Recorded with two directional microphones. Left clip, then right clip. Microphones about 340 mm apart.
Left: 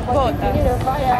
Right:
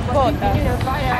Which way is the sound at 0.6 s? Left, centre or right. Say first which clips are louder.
Left 3 dB; left.